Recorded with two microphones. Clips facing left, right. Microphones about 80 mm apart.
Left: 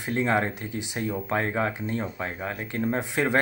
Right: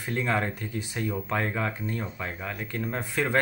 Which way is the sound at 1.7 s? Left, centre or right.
Left.